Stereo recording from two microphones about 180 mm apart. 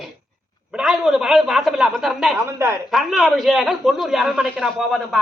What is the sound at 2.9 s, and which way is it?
Speech, centre (ahead or behind).